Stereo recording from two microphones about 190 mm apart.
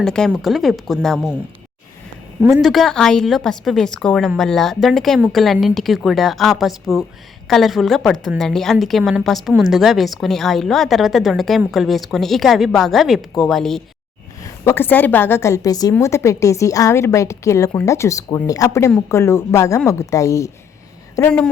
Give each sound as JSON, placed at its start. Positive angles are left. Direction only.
{"t": 0.0, "sound": "a woman's voice", "side_deg": 5}
{"t": 2.5, "sound": "a woman's voice", "side_deg": 0}
{"t": 14.6, "sound": "a woman's voice", "side_deg": 10}
{"t": 21.2, "sound": "a woman's voice", "side_deg": 5}